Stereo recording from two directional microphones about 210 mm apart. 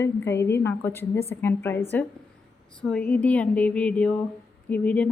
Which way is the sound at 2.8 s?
5° left (ahead or behind).